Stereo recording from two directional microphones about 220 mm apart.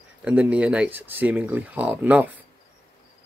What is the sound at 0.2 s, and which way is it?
Speech, 5° right (ahead or behind).